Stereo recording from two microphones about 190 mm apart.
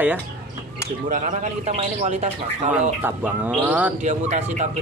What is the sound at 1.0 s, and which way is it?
Speech, 45° right (ahead or behind).